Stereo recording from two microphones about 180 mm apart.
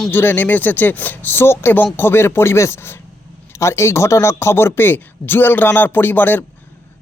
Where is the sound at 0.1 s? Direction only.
10° left (ahead or behind).